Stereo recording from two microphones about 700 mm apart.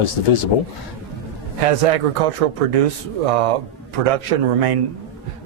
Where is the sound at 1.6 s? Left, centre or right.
Right.